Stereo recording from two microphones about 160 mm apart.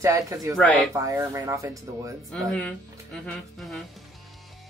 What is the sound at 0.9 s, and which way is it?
Speech, 20° right (ahead or behind).